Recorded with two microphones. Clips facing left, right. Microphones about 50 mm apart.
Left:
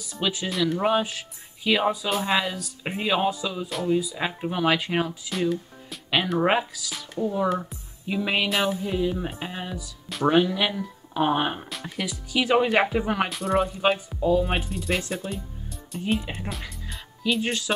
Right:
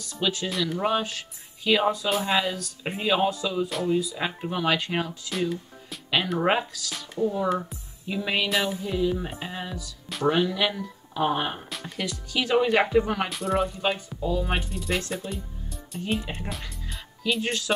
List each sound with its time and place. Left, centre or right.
0.0 s speech: centre
0.7 s speech: centre
8.5 s speech: centre
8.8 s speech: centre
11.7 s speech: centre
13.3 s speech: centre